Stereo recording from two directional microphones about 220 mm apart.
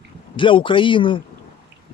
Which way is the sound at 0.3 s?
25° left (ahead or behind).